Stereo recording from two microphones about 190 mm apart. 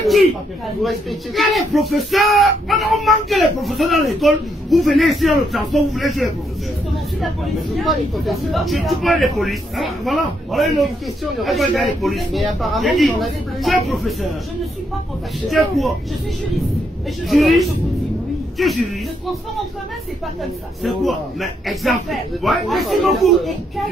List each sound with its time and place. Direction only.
0.8 s speech: centre (ahead or behind)
7.7 s speech: centre (ahead or behind)
15.4 s speech: centre (ahead or behind)
17.3 s speech: centre (ahead or behind)
20.8 s speech: centre (ahead or behind)